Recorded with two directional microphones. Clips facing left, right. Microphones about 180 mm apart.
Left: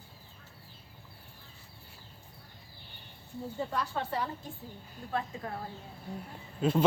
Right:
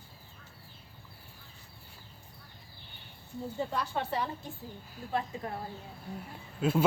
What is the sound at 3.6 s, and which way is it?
A woman's voice, 20° right (ahead or behind).